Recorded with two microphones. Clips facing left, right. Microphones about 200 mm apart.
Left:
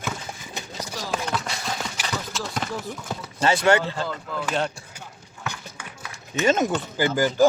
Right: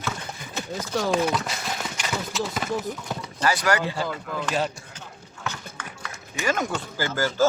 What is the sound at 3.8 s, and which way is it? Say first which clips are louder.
Speech: right 1 dB; 10° right (ahead or behind).